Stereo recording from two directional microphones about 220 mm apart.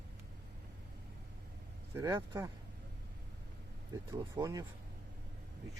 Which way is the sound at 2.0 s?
15° right (ahead or behind).